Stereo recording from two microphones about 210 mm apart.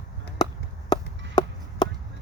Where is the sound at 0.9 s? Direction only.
20° left (ahead or behind).